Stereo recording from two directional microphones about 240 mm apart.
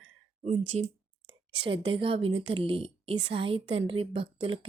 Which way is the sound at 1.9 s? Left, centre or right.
Right.